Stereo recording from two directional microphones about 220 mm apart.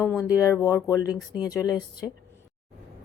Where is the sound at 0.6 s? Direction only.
10° left (ahead or behind).